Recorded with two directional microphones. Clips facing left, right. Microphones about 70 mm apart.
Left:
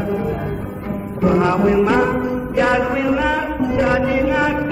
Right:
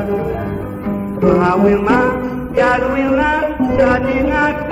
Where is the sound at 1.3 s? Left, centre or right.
Right.